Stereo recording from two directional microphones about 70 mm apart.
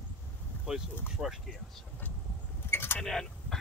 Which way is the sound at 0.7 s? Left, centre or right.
Centre.